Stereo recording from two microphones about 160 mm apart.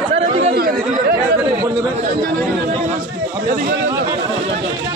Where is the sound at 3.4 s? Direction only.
60° right (ahead or behind).